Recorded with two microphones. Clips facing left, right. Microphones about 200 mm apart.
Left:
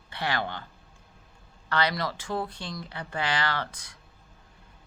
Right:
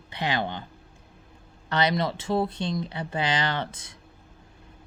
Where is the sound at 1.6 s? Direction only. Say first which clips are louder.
Right 3 dB; 20° right (ahead or behind).